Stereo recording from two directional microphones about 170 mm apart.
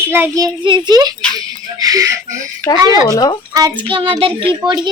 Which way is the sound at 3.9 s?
30° right (ahead or behind).